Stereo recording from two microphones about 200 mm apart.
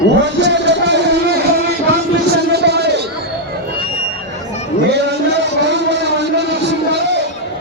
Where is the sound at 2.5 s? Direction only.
55° right (ahead or behind).